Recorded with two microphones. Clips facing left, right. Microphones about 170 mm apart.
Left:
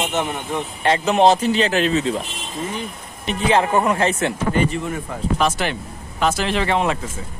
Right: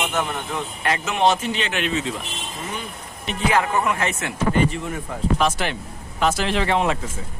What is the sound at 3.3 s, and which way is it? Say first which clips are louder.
Speech: left 3 dB; 30° left (ahead or behind).